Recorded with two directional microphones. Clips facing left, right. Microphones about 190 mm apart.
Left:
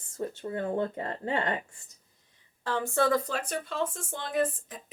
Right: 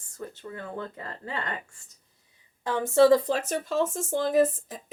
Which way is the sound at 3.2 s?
35° right (ahead or behind).